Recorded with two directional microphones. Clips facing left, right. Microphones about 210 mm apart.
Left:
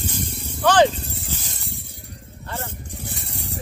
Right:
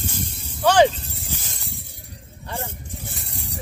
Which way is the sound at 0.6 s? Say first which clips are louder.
Even; 10° right (ahead or behind).